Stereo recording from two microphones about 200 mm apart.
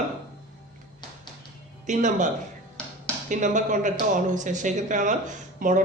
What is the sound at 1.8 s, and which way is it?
Speech, 40° right (ahead or behind).